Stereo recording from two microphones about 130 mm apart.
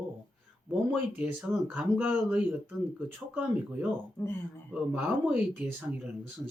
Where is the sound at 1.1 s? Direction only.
15° right (ahead or behind).